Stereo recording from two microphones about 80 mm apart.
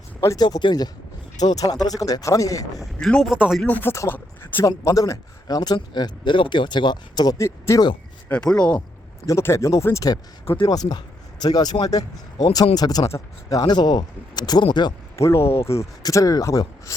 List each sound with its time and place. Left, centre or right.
0.3 s speech: left
1.4 s speech: left
3.0 s speech: centre
3.3 s speech: centre
3.7 s speech: left
4.6 s speech: left
7.3 s speech: left
8.3 s speech: centre
9.2 s speech: left
10.7 s speech: left
15.2 s speech: left
16.0 s speech: left